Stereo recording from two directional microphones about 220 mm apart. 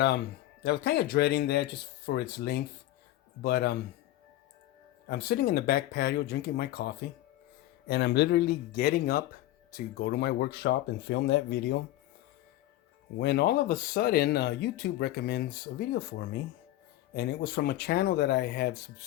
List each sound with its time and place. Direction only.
0.6 s speech: 50° left (ahead or behind)
5.0 s speech: 45° left (ahead or behind)
13.1 s speech: 50° left (ahead or behind)
17.2 s speech: 45° left (ahead or behind)